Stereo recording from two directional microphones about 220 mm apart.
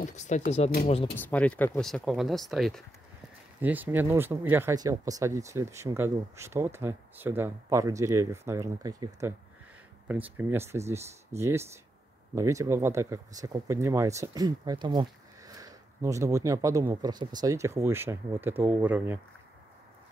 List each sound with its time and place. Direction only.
0.0 s speech: 30° left (ahead or behind)
1.1 s speech: 5° left (ahead or behind)